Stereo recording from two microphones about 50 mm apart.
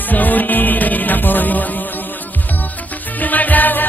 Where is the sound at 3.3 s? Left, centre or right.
Left.